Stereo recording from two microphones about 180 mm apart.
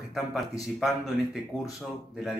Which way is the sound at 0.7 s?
Centre (ahead or behind).